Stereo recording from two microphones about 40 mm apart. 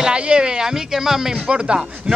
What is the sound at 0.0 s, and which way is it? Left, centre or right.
Speech, right.